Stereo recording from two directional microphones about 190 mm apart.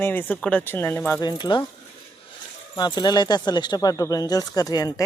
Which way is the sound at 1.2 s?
25° left (ahead or behind).